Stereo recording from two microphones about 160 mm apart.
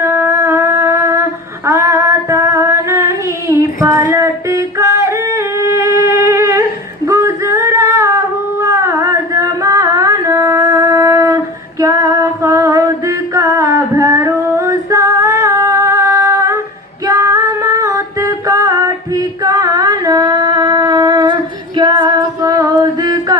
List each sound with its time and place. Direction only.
0.0 s music: 15° right (ahead or behind)
1.6 s female singing: 20° right (ahead or behind)
4.1 s music: 20° right (ahead or behind)
7.1 s female singing: 20° right (ahead or behind)
8.6 s music: 20° right (ahead or behind)
21.8 s female singing: 30° right (ahead or behind)